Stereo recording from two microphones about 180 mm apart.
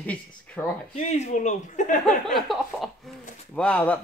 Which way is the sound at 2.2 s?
Centre (ahead or behind).